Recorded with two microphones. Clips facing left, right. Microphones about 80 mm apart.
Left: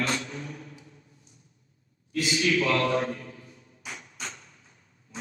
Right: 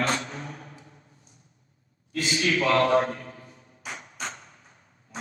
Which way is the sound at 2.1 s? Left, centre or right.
Right.